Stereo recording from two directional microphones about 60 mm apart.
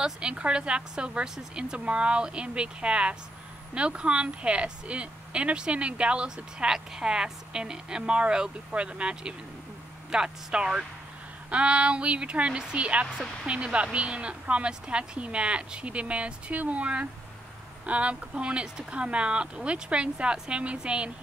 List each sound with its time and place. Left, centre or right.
0.0 s speech: centre